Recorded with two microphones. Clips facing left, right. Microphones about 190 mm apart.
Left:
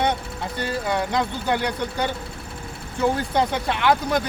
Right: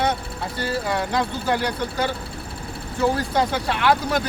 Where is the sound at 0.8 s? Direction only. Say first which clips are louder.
Left 2 dB; 20° left (ahead or behind).